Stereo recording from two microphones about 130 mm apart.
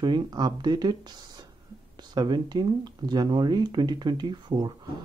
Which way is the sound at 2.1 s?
35° right (ahead or behind).